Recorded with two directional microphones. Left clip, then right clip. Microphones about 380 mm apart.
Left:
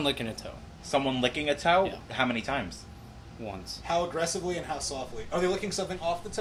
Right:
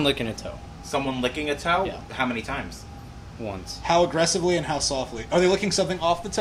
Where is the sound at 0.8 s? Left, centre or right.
Left.